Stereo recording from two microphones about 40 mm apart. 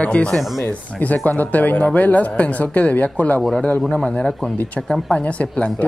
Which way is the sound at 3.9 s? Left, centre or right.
Left.